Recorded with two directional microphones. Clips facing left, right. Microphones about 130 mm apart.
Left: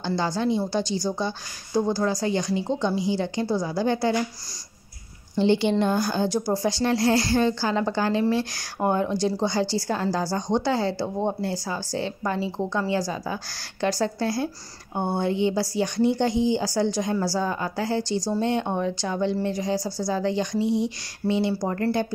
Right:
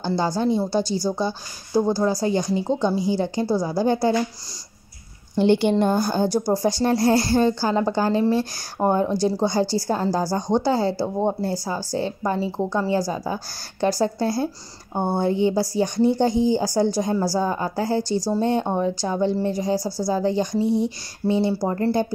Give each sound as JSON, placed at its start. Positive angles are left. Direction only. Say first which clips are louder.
{"t": 0.2, "sound": "a woman's voice", "louder": "right 3 dB", "side_deg": -40}
{"t": 0.9, "sound": "speech", "louder": "right 3 dB", "side_deg": -5}
{"t": 1.8, "sound": "a woman's voice", "louder": "right 3 dB", "side_deg": -40}
{"t": 5.4, "sound": "a woman's voice", "louder": "right 3 dB", "side_deg": -55}